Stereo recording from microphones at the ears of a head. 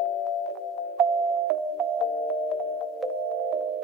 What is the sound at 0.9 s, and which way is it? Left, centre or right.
Music, right.